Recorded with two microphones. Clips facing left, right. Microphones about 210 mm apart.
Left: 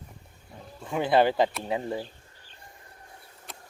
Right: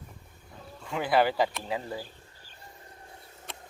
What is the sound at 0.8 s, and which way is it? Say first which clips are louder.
Speech: left 3 dB; 20° left (ahead or behind).